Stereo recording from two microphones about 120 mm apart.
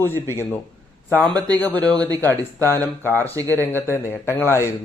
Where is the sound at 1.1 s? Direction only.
10° left (ahead or behind).